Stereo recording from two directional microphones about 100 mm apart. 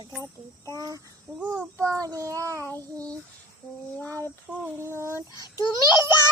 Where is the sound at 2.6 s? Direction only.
20° left (ahead or behind).